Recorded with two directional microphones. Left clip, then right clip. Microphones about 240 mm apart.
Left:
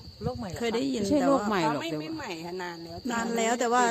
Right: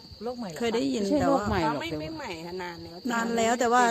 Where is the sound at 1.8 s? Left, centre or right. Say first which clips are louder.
Even; centre.